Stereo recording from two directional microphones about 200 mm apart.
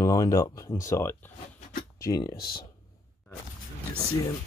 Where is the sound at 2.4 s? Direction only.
50° left (ahead or behind).